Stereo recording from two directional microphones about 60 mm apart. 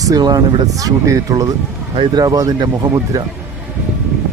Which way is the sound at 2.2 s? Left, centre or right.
Right.